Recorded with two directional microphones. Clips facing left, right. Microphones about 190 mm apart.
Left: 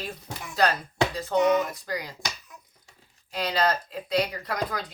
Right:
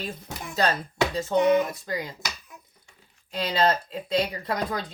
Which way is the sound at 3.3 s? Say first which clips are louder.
Right 2 dB; 25° right (ahead or behind).